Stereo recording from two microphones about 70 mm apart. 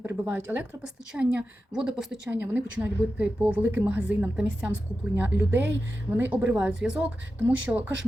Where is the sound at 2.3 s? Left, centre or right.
Right.